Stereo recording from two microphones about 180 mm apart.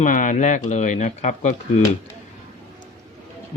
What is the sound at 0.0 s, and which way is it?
Speech, 45° left (ahead or behind).